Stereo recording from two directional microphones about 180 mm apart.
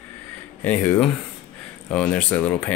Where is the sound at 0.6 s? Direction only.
10° left (ahead or behind).